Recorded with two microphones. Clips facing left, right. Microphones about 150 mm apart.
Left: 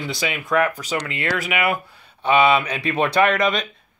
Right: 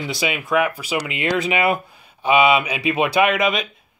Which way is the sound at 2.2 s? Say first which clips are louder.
Right 1 dB; 10° right (ahead or behind).